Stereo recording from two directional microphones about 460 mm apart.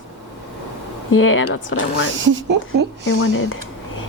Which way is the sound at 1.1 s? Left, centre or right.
Left.